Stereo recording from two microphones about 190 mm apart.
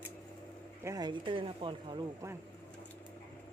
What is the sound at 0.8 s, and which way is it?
Speech, 20° right (ahead or behind).